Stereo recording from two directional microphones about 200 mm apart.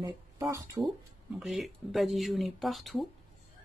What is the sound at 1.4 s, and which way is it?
Speech, centre (ahead or behind).